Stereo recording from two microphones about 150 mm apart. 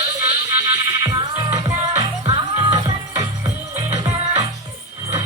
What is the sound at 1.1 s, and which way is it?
Music, 30° right (ahead or behind).